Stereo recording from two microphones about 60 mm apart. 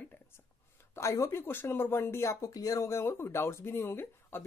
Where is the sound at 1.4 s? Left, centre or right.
Left.